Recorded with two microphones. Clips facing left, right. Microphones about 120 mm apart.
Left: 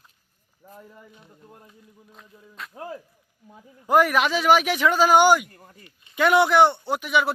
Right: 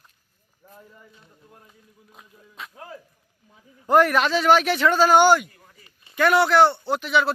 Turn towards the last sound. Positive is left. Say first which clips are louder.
# right 1 dB
turn(degrees=15)  # may be behind; listen again after turning